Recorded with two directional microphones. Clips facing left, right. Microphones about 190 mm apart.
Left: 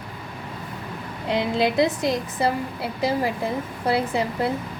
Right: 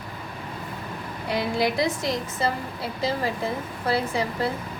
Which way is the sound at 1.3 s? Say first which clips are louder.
Left 2 dB; 20° left (ahead or behind).